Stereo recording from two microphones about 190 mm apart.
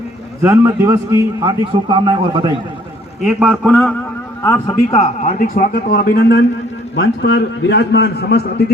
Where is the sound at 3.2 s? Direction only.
10° right (ahead or behind).